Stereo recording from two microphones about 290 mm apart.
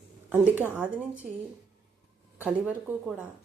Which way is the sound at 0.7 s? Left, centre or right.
Centre.